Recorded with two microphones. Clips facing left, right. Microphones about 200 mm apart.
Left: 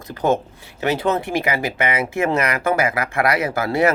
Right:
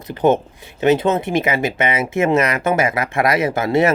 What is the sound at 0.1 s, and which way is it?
Speech, 20° right (ahead or behind).